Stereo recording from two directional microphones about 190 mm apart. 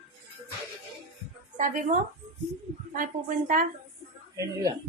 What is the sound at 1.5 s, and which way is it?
Speech, 40° right (ahead or behind).